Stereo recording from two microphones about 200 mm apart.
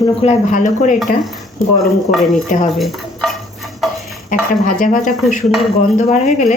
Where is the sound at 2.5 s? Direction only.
40° left (ahead or behind).